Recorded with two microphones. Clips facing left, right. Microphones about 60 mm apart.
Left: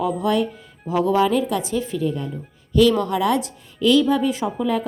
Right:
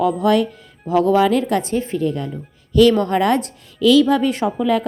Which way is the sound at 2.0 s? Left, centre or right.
Right.